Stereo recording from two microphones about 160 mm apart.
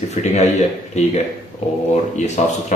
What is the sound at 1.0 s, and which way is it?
Speech, 45° left (ahead or behind).